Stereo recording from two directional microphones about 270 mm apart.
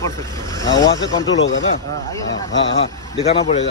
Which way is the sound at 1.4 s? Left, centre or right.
Left.